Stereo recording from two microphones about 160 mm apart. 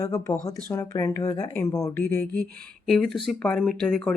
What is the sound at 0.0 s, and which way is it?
Speech, 20° left (ahead or behind).